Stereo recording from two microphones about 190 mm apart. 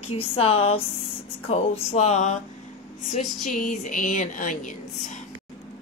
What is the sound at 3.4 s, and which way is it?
A woman's voice, 40° left (ahead or behind).